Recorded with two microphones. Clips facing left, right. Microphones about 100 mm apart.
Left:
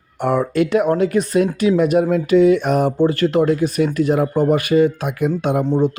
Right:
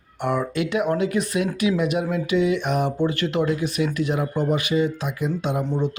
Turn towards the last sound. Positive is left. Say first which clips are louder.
# left 7 dB
turn(degrees=35)  # may be behind; listen again after turning